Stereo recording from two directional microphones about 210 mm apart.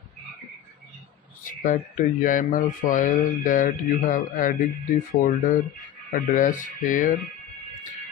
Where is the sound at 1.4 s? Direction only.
40° left (ahead or behind).